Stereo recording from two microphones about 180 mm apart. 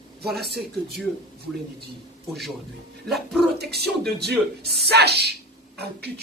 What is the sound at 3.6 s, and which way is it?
Speech, 65° right (ahead or behind).